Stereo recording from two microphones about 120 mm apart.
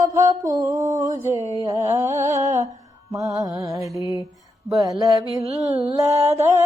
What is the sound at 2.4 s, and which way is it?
Music, 75° right (ahead or behind).